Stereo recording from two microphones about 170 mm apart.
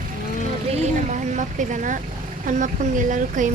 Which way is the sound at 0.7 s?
45° right (ahead or behind).